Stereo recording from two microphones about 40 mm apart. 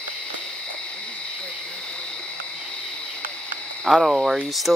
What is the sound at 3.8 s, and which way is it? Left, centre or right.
Speech, centre.